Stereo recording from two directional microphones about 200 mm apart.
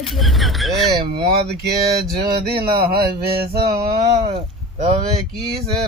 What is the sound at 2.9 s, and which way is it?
Mantra, 50° right (ahead or behind).